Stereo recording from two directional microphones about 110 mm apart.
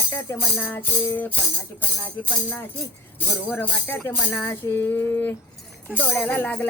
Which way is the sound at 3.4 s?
15° left (ahead or behind).